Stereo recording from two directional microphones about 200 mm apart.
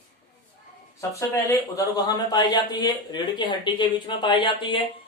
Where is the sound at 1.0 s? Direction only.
15° left (ahead or behind).